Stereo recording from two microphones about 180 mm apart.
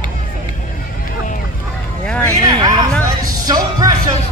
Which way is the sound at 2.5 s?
25° right (ahead or behind).